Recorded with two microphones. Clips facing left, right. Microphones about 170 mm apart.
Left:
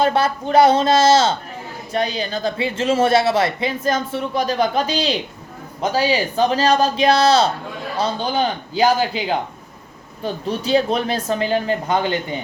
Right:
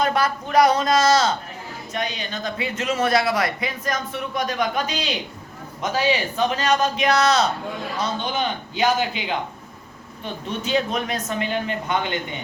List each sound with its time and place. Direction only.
0.0 s speech: 30° left (ahead or behind)